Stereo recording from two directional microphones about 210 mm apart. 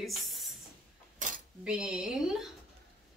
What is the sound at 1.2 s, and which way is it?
Cutlery, 40° right (ahead or behind).